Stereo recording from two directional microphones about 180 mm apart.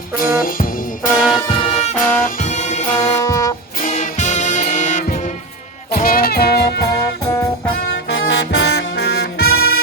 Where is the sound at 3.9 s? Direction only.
40° left (ahead or behind).